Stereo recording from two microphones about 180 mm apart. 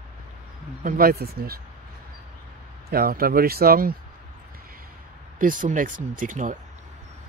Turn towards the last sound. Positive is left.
turn(degrees=-45)  # may be behind; listen again after turning